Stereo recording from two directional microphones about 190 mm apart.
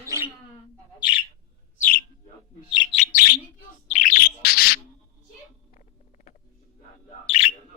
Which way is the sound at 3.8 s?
40° left (ahead or behind).